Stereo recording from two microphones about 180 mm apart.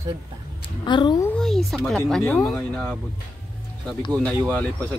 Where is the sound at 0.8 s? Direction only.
25° left (ahead or behind).